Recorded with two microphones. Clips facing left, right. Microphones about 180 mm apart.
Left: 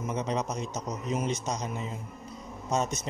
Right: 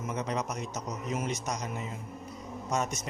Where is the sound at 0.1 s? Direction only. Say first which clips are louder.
Left 2 dB; 25° left (ahead or behind).